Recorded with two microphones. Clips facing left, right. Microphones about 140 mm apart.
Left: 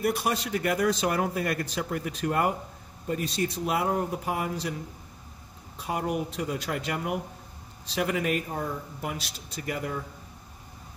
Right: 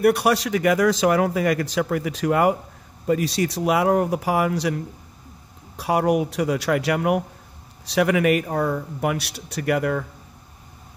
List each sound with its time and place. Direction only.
0.0 s speech: 70° right (ahead or behind)